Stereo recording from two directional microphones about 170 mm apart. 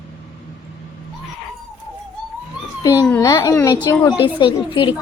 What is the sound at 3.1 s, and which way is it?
Speech, 20° left (ahead or behind).